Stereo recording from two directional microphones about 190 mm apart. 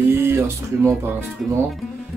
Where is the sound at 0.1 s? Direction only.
15° right (ahead or behind).